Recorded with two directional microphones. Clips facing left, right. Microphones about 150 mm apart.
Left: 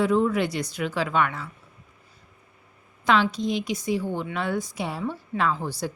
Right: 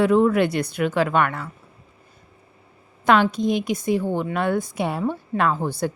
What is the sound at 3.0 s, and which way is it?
A woman's voice, 55° right (ahead or behind).